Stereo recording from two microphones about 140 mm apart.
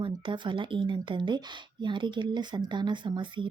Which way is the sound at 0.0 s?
35° right (ahead or behind).